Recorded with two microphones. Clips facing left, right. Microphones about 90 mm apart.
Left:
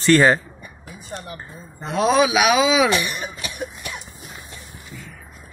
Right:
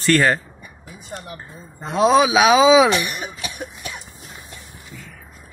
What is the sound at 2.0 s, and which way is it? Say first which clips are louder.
Speech: right 3 dB; 25° right (ahead or behind).